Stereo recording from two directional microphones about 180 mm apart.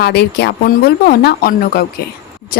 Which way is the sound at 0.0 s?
65° left (ahead or behind).